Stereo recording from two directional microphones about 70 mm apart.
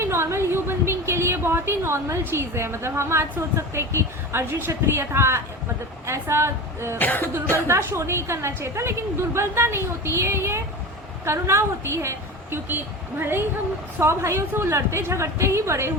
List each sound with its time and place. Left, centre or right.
0.0 s a woman's voice: right
7.0 s cough: left
7.7 s a woman's voice: right